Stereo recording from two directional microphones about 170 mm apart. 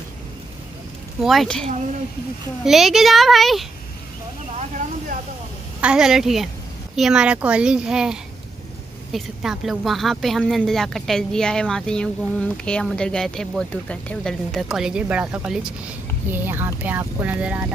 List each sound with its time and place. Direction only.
1.2 s a woman's voice: centre (ahead or behind)
4.6 s a sound: 45° right (ahead or behind)
5.8 s a woman's voice: 5° right (ahead or behind)